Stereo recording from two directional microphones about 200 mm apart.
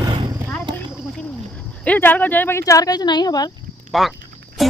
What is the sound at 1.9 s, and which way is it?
Speech, 10° left (ahead or behind).